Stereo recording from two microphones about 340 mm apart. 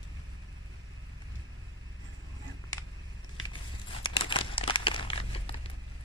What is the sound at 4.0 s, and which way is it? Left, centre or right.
Crumpling, centre.